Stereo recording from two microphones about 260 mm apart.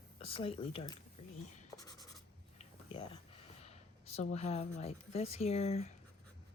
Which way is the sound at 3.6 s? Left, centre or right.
Left.